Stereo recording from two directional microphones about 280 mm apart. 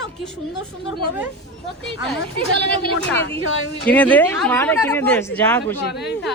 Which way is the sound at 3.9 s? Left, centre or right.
Centre.